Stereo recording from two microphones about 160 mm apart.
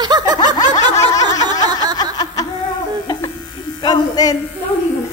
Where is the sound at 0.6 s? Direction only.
20° left (ahead or behind).